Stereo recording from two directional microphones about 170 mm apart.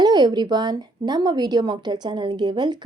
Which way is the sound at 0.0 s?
25° right (ahead or behind).